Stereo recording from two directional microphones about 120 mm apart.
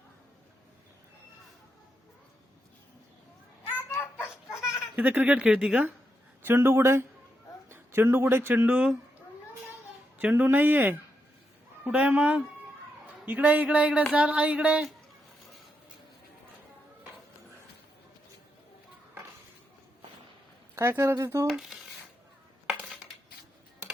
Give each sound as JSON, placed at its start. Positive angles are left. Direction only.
{"t": 3.8, "sound": "children playing", "side_deg": 20}
{"t": 4.7, "sound": "speech", "side_deg": -10}
{"t": 6.4, "sound": "speech", "side_deg": -20}
{"t": 10.2, "sound": "a sound", "side_deg": -15}
{"t": 20.7, "sound": "speech", "side_deg": -20}
{"t": 21.4, "sound": "speech", "side_deg": 0}